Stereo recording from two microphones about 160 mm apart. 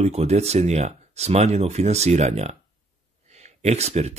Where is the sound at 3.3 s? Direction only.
45° right (ahead or behind).